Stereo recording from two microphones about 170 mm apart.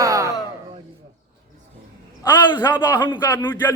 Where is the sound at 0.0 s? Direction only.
20° right (ahead or behind).